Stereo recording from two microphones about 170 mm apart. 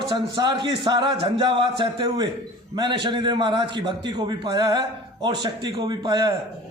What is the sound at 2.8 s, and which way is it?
A man's voice, 25° right (ahead or behind).